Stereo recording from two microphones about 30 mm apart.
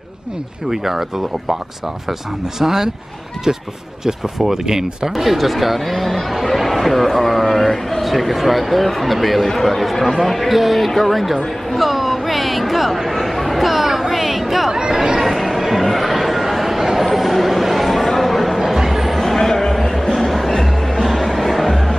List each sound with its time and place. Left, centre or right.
0.7 s speech: centre
2.6 s speech: centre
5.1 s chatter: centre
8.8 s speech: centre
10.9 s a sound: centre
14.7 s chatter: centre
15.1 s a sound: centre
19.3 s a sound: centre
20.2 s music: centre